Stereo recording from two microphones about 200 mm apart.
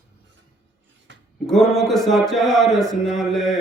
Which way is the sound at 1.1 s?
65° right (ahead or behind).